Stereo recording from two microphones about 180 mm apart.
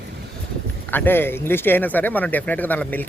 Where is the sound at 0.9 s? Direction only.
10° left (ahead or behind).